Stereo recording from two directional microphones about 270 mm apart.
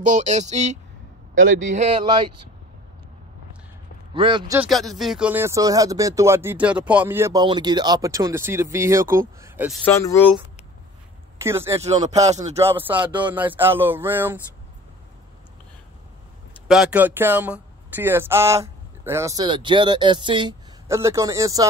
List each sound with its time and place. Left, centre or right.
0.0 s speech: right
1.3 s a man's voice: right
1.7 s speech: right
4.1 s speech: centre
4.6 s speech: centre
9.8 s speech: centre
11.3 s speech: centre
11.8 s speech: right
12.4 s speech: centre
16.6 s speech: centre